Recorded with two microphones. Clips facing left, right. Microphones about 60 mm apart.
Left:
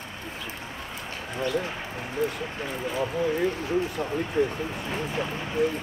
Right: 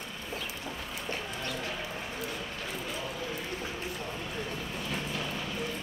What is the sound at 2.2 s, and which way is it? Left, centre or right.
Speech, left.